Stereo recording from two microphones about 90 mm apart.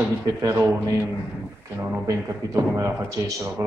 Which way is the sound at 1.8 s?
40° right (ahead or behind).